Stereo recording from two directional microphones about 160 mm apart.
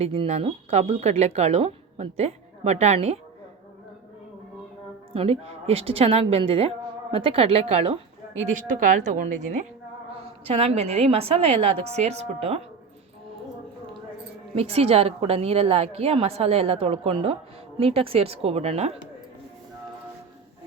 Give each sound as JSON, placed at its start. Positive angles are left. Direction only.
{"t": 0.0, "sound": "speech", "side_deg": -40}
{"t": 5.1, "sound": "a woman's voice", "side_deg": -40}
{"t": 8.6, "sound": "a woman's voice", "side_deg": -55}
{"t": 10.4, "sound": "a woman's voice", "side_deg": -35}
{"t": 14.5, "sound": "a woman's voice", "side_deg": -40}